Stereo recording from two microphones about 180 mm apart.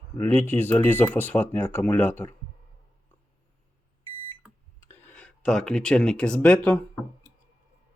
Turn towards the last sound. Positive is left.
turn(degrees=5)  # may be behind; listen again after turning